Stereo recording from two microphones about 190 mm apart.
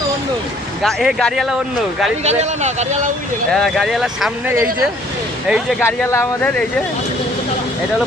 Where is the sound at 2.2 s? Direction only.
35° right (ahead or behind).